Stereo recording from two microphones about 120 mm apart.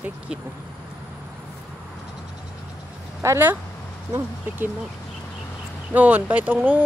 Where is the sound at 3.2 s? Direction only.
20° right (ahead or behind).